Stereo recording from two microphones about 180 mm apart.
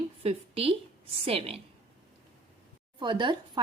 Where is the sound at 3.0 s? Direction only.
25° right (ahead or behind).